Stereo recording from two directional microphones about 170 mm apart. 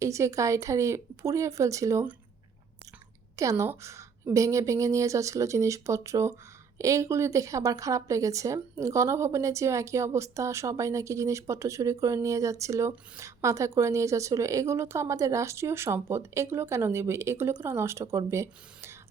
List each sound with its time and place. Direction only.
0.0 s a woman's voice: 15° right (ahead or behind)
3.3 s a woman's voice: 15° right (ahead or behind)